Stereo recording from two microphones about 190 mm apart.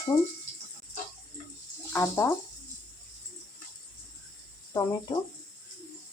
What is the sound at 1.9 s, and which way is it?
Speech, 15° left (ahead or behind).